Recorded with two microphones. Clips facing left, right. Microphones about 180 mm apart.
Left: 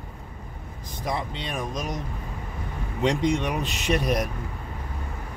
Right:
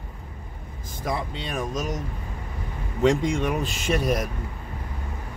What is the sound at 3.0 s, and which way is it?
Speech, 45° right (ahead or behind).